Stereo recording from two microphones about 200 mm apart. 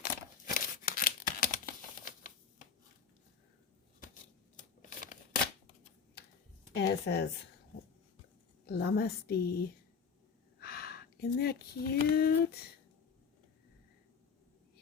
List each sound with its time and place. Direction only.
0.0 s scissors: 45° left (ahead or behind)
6.7 s a woman's voice: 60° left (ahead or behind)
8.6 s a woman's voice: 50° left (ahead or behind)